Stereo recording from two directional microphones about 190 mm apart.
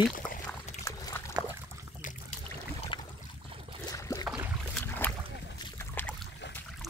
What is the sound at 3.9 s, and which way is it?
Boat, 20° left (ahead or behind).